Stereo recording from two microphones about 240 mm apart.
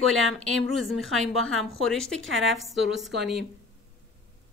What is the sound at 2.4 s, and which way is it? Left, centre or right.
Speech, centre.